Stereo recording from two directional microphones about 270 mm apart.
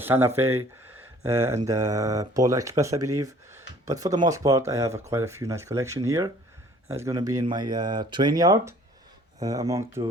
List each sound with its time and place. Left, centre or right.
0.0 s speech: centre
1.6 s speech: centre